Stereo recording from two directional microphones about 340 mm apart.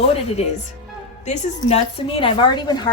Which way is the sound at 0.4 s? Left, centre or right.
Centre.